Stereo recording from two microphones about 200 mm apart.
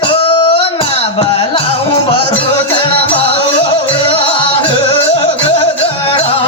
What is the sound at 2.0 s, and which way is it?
Music, 25° left (ahead or behind).